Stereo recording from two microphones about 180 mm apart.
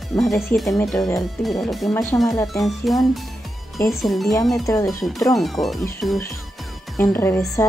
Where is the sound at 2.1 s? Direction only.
15° left (ahead or behind).